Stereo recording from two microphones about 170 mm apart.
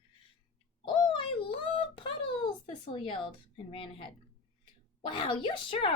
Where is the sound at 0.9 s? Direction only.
25° left (ahead or behind).